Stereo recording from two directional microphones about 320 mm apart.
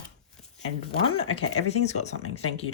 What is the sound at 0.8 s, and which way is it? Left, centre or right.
Speech, centre.